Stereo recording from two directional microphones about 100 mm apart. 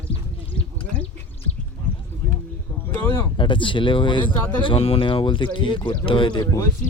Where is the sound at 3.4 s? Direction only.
55° left (ahead or behind).